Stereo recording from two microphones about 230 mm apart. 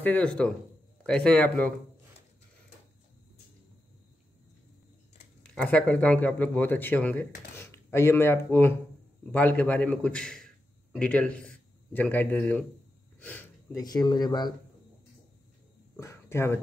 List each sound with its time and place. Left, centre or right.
0.0 s a man's voice: centre
5.4 s a man's voice: centre
16.0 s a sound: centre